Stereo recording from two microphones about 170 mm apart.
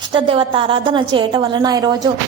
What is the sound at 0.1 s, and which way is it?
A woman's voice, 30° right (ahead or behind).